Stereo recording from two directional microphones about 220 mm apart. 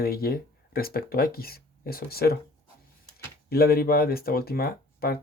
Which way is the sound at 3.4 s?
45° left (ahead or behind).